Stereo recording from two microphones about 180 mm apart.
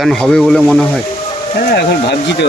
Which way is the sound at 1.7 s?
70° left (ahead or behind).